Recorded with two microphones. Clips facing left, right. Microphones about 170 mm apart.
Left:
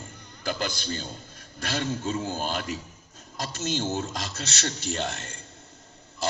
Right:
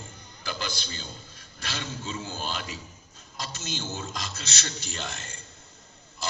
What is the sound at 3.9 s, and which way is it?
Speech, 40° left (ahead or behind).